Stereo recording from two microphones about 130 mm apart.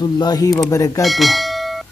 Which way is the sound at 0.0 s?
30° left (ahead or behind).